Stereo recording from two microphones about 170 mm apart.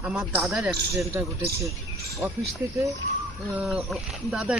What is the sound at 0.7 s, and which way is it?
Speech, 20° right (ahead or behind).